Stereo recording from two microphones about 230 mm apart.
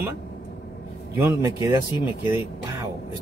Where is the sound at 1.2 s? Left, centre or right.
Centre.